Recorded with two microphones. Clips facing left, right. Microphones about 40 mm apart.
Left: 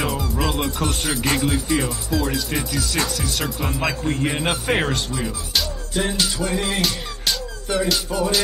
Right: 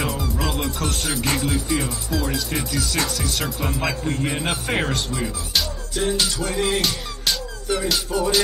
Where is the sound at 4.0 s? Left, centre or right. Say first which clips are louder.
Left 2 dB; left.